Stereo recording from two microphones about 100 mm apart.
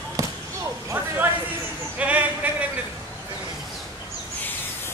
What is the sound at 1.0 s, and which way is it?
Speech, 20° right (ahead or behind).